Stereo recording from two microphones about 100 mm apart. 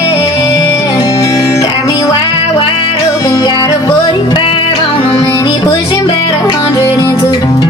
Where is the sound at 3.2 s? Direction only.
40° left (ahead or behind).